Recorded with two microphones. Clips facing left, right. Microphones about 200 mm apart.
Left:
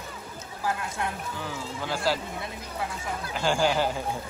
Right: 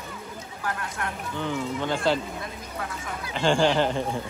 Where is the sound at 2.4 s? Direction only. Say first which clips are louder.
Left 1 dB; 25° left (ahead or behind).